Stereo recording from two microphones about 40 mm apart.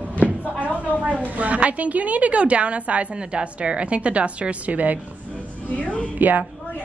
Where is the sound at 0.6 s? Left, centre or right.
Right.